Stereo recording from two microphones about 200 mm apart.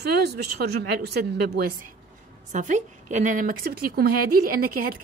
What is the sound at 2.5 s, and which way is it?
A woman's voice, 40° right (ahead or behind).